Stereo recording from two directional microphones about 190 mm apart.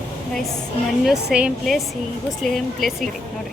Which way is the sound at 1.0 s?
5° right (ahead or behind).